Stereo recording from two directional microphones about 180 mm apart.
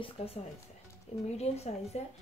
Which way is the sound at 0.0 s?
30° left (ahead or behind).